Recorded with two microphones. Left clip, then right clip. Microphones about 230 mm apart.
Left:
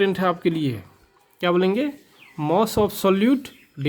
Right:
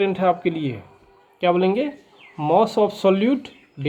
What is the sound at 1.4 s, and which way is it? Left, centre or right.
Speech, left.